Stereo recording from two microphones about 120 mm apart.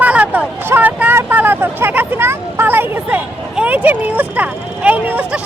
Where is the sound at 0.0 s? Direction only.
10° right (ahead or behind).